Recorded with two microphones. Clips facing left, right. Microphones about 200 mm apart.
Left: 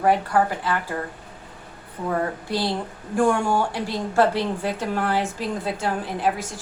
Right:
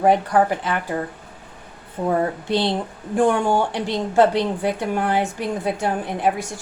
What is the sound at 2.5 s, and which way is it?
A woman's voice, 25° right (ahead or behind).